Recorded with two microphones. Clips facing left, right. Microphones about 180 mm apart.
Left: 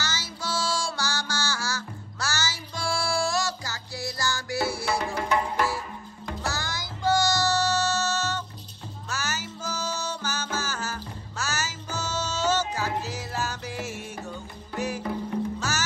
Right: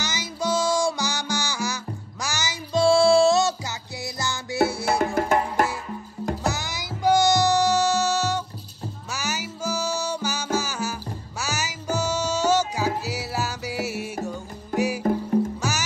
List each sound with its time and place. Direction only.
0.0 s music: 15° right (ahead or behind)
4.8 s music: 50° right (ahead or behind)
6.4 s music: 20° right (ahead or behind)
14.7 s music: 45° right (ahead or behind)